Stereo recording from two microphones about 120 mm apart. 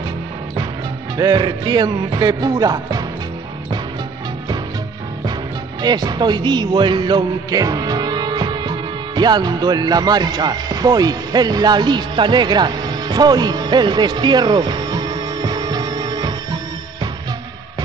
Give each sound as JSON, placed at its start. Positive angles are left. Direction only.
{"t": 1.1, "sound": "music", "side_deg": -35}
{"t": 5.8, "sound": "speech", "side_deg": -35}